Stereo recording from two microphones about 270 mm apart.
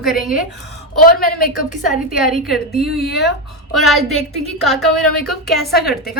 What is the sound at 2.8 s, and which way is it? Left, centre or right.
Speech, left.